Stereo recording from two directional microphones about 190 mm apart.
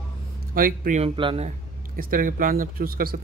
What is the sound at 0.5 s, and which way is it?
Speech, 50° right (ahead or behind).